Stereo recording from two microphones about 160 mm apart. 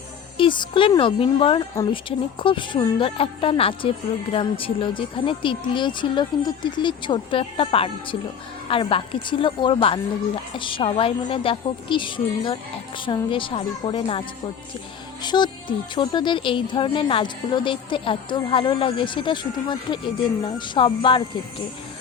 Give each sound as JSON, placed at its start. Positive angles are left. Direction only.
{"t": 0.3, "sound": "speech", "side_deg": 30}